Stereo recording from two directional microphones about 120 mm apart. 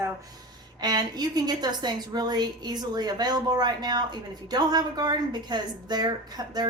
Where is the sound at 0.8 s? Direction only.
35° right (ahead or behind).